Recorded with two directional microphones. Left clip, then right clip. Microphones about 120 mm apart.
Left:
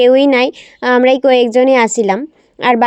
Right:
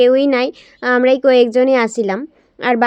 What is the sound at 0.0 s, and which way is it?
Speech, 45° left (ahead or behind).